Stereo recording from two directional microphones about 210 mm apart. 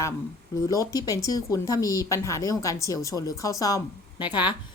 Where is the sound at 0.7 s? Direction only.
15° left (ahead or behind).